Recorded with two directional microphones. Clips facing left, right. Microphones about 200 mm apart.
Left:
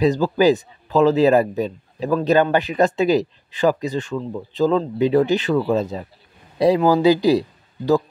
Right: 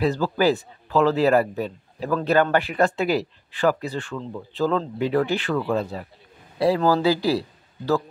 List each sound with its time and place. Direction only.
0.0 s a man's voice: 15° left (ahead or behind)